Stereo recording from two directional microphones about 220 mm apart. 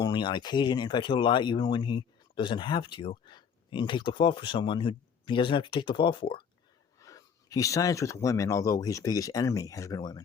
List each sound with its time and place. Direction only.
0.0 s speech: 20° left (ahead or behind)